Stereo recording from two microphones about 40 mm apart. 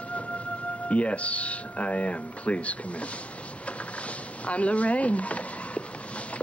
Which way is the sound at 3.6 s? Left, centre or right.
Left.